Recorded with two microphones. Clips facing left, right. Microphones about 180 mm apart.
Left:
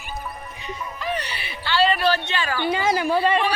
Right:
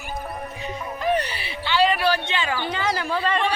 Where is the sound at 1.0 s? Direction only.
50° right (ahead or behind).